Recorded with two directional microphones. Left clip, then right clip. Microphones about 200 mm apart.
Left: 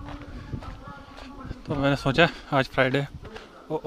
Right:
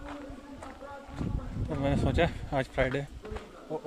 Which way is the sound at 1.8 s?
20° left (ahead or behind).